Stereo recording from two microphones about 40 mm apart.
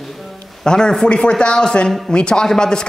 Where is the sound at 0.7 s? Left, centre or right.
Centre.